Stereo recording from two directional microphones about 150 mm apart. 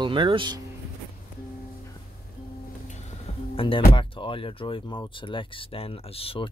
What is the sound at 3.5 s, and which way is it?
Speech, 35° left (ahead or behind).